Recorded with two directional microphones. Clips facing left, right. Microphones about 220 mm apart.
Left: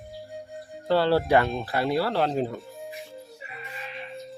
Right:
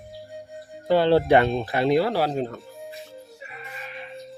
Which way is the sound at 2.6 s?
Centre (ahead or behind).